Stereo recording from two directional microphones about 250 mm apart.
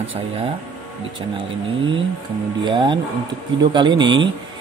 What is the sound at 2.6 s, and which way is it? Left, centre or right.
Speech, centre.